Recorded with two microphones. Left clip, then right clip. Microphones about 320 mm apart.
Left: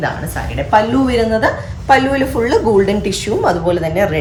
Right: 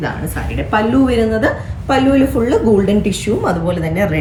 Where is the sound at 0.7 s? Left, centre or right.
Left.